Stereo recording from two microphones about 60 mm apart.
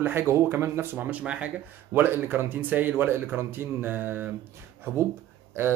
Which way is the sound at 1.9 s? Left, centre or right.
Right.